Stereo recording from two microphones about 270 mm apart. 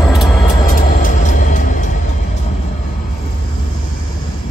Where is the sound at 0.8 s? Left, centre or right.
Left.